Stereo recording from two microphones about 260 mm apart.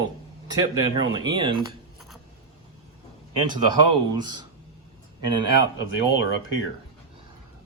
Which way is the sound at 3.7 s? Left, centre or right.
Centre.